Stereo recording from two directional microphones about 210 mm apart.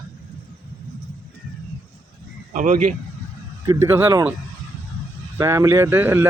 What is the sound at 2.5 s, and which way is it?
Speech, 35° right (ahead or behind).